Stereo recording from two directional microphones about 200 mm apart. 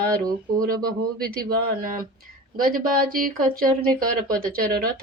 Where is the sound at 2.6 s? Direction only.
45° right (ahead or behind).